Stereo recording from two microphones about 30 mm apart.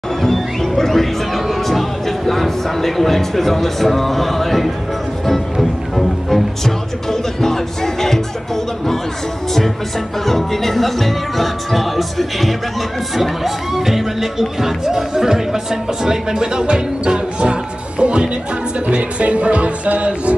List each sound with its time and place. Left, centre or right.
0.2 s music: centre
10.2 s speech: centre; by 17.2 s right
17.4 s music: right